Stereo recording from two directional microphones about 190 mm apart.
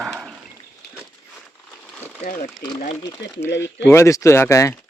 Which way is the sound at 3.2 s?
70° left (ahead or behind).